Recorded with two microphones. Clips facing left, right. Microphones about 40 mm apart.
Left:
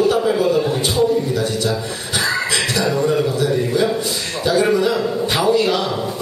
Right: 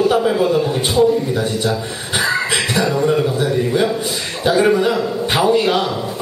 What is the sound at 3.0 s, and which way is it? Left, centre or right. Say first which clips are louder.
Speech: right 1 dB; centre.